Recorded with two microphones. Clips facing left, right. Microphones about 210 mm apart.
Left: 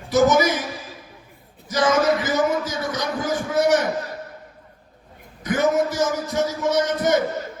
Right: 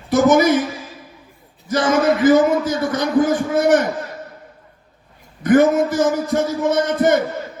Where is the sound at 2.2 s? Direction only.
55° right (ahead or behind).